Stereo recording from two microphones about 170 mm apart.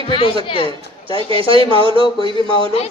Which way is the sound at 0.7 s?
30° right (ahead or behind).